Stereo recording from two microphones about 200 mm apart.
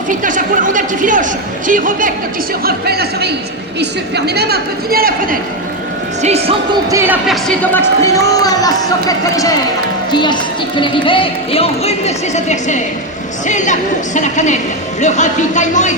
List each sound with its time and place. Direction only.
0.2 s a man's voice: 40° right (ahead or behind)
6.2 s a man's voice: 30° right (ahead or behind)
6.9 s speech: 10° right (ahead or behind)
7.3 s a woman's voice: 5° left (ahead or behind); by 16.0 s 35° left (ahead or behind)